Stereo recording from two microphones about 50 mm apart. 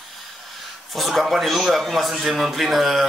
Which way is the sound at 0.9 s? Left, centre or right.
Centre.